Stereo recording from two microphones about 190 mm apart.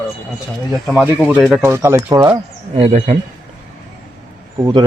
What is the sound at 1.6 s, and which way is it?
Speech, 15° right (ahead or behind).